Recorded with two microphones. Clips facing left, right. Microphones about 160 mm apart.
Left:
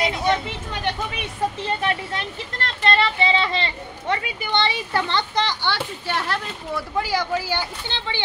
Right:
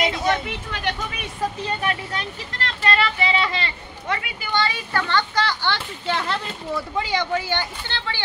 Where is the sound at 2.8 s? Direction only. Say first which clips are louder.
Left 2 dB; 30° left (ahead or behind).